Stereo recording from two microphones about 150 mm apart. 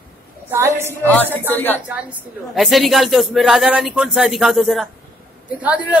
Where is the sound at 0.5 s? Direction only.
15° right (ahead or behind).